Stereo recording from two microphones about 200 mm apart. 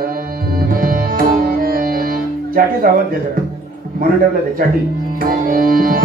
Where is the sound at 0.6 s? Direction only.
45° right (ahead or behind).